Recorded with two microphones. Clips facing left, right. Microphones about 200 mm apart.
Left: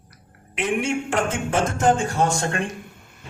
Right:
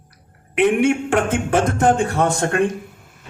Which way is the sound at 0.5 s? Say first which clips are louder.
Right 8 dB; 60° right (ahead or behind).